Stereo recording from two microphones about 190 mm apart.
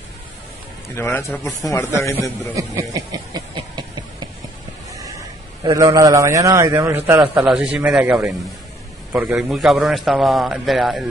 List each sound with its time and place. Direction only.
0.8 s a man's voice: 15° left (ahead or behind)
2.5 s a sound: 15° right (ahead or behind)
5.6 s a man's voice: 15° right (ahead or behind); by 11.1 s centre (ahead or behind)